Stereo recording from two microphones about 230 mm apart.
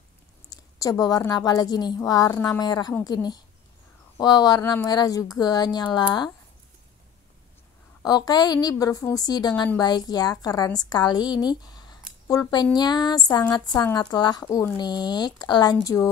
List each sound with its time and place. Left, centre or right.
0.5 s a woman's voice: centre
8.0 s a woman's voice: centre